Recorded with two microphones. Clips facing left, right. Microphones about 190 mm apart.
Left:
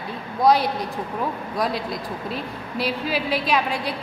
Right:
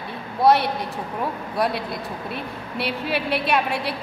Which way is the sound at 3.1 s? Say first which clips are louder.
Right 3 dB; 65° right (ahead or behind).